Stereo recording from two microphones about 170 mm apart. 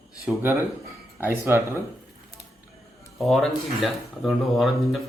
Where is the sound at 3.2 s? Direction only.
Centre (ahead or behind).